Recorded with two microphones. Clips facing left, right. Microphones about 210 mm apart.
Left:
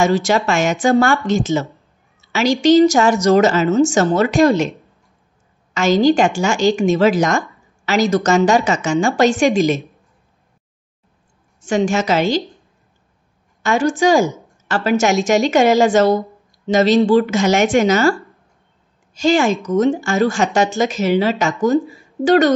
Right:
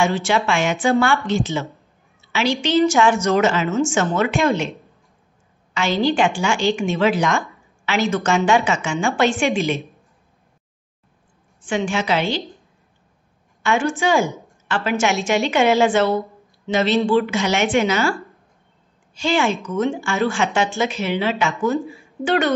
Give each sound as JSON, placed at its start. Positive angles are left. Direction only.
{"t": 0.0, "sound": "a woman's voice", "side_deg": 40}
{"t": 2.2, "sound": "a sound", "side_deg": 40}
{"t": 2.6, "sound": "a woman's voice", "side_deg": 40}
{"t": 5.8, "sound": "a woman's voice", "side_deg": 40}
{"t": 11.6, "sound": "a woman's voice", "side_deg": 40}
{"t": 13.6, "sound": "a woman's voice", "side_deg": 40}
{"t": 19.2, "sound": "a woman's voice", "side_deg": 40}